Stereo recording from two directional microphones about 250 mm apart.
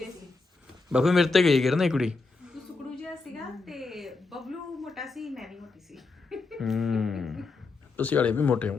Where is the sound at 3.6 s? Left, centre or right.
Centre.